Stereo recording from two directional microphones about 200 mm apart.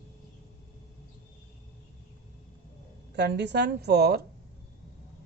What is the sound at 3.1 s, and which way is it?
A woman's voice, 55° right (ahead or behind).